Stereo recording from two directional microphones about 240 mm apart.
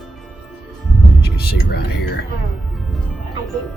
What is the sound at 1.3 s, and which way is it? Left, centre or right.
Speech, left.